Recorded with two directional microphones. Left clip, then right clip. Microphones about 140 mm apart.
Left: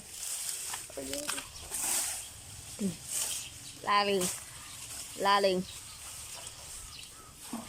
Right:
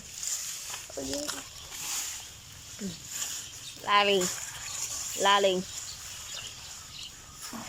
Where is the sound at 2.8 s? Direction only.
15° left (ahead or behind).